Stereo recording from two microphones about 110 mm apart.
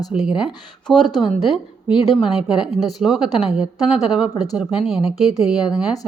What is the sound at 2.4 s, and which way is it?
A woman's voice, 5° right (ahead or behind).